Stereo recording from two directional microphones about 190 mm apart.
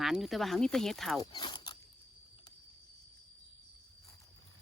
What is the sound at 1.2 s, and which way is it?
Speech, 25° left (ahead or behind).